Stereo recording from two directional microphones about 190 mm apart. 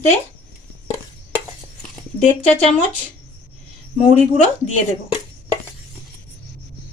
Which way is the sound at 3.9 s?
35° left (ahead or behind).